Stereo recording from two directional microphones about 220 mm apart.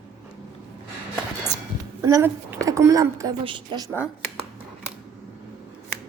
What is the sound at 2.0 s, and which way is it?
Speech, 15° right (ahead or behind).